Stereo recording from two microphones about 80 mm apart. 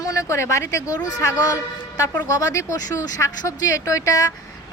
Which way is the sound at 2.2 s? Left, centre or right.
Left.